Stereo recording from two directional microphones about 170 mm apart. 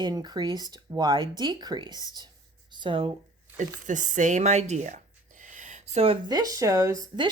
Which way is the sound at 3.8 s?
50° right (ahead or behind).